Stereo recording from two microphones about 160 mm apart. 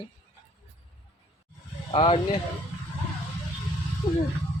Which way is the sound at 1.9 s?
35° left (ahead or behind).